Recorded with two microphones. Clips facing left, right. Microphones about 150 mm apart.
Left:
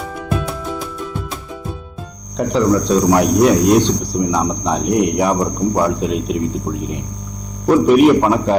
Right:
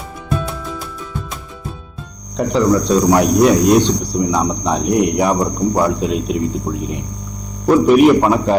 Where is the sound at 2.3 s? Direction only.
20° right (ahead or behind).